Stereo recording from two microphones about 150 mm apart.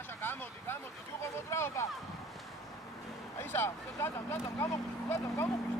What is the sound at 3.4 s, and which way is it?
Speech, 15° left (ahead or behind).